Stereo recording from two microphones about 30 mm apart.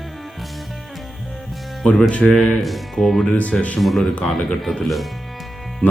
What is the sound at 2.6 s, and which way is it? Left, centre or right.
Speech, centre.